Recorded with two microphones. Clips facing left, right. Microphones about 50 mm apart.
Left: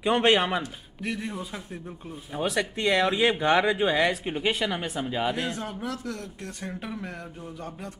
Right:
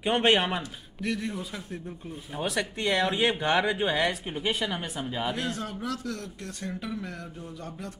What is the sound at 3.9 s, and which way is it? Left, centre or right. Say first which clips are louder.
Speech: left 3 dB; left.